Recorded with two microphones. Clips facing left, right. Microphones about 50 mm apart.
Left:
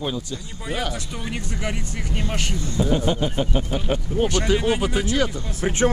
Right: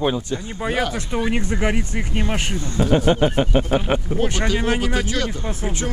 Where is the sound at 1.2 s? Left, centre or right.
Right.